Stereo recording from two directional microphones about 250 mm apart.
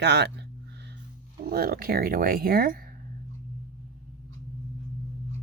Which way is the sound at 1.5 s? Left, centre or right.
Right.